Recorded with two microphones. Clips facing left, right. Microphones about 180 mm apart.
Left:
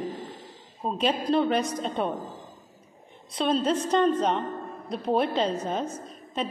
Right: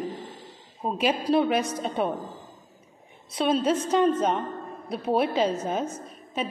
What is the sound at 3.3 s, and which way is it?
A woman's voice, 5° right (ahead or behind).